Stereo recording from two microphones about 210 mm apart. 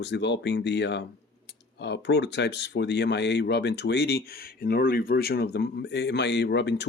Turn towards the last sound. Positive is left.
turn(degrees=55)  # may be behind; listen again after turning